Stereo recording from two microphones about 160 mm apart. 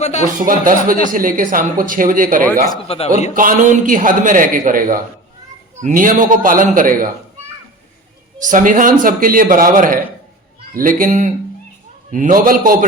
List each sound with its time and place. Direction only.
0.0 s speech: 45° left (ahead or behind)
0.6 s a man's voice: 60° right (ahead or behind)
2.8 s a man's voice: 40° left (ahead or behind)
3.3 s a man's voice: 55° right (ahead or behind)
8.4 s a man's voice: 55° right (ahead or behind)